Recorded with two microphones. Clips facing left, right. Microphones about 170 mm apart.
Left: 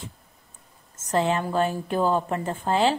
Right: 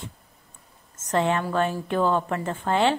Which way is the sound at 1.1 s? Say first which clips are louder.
Even; 30° left (ahead or behind).